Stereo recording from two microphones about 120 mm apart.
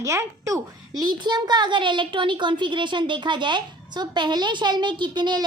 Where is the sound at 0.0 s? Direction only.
25° right (ahead or behind).